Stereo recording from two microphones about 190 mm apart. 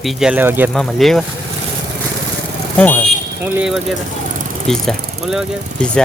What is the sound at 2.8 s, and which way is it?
Speech, 10° left (ahead or behind).